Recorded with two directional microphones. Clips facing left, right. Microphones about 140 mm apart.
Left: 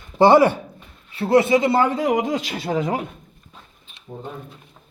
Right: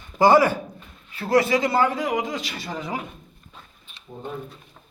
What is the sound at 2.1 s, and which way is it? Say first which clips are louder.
Speech: left 5 dB; 50° left (ahead or behind).